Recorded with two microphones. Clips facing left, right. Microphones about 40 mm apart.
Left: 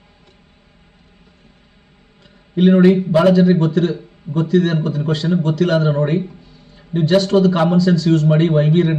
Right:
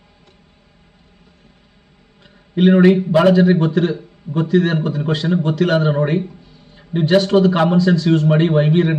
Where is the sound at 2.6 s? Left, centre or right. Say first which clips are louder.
Even; right.